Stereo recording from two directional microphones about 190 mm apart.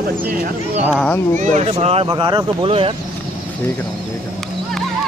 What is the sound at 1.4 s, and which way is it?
Speech, 40° right (ahead or behind).